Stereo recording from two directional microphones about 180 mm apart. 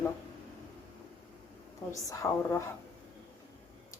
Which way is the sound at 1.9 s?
15° left (ahead or behind).